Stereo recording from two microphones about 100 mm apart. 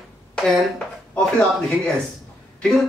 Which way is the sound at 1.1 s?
10° left (ahead or behind).